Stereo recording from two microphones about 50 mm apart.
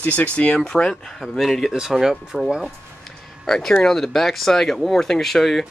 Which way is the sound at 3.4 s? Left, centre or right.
Centre.